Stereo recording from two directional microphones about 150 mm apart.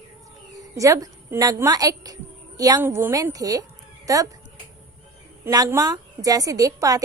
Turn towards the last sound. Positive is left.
turn(degrees=-20)  # may be behind; listen again after turning